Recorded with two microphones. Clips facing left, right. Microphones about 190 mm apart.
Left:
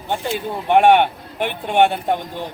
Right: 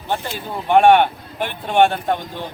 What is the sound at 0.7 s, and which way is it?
Speech, 15° left (ahead or behind).